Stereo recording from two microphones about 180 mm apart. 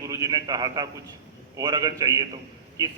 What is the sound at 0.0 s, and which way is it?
A man's voice, 20° right (ahead or behind).